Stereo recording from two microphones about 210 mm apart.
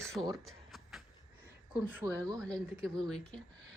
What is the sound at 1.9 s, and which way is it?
Speech, 15° right (ahead or behind).